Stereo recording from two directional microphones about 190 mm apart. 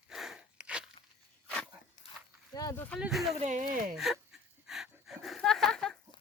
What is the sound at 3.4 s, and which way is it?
Speech, 45° right (ahead or behind).